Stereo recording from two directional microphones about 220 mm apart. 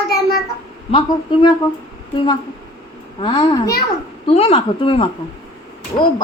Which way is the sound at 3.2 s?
20° left (ahead or behind).